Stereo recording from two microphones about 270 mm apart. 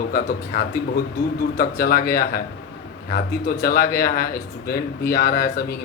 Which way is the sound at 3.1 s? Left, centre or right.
Left.